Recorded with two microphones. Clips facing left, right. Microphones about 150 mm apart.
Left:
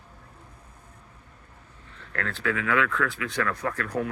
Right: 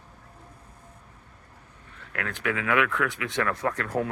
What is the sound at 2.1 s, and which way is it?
Speech, 15° right (ahead or behind).